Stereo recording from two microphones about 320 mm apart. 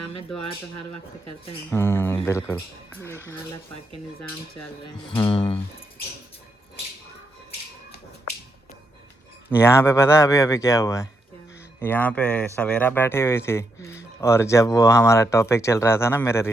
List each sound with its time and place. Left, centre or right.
1.7 s speech: centre
5.1 s speech: centre
9.5 s speech: centre